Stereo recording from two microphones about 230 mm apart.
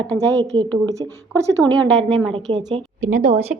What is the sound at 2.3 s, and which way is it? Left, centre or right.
A woman's voice, right.